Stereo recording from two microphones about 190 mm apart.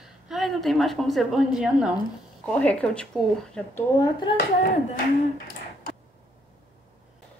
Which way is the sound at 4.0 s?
25° left (ahead or behind).